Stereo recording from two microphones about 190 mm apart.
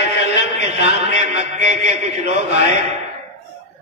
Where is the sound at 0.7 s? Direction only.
35° right (ahead or behind).